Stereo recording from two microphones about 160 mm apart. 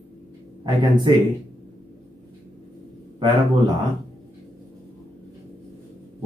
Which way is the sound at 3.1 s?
30° right (ahead or behind).